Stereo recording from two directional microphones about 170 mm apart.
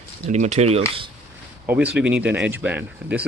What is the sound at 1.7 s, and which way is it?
Speech, 10° right (ahead or behind).